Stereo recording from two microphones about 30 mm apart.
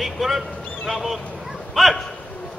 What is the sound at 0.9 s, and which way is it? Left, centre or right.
Speech, centre.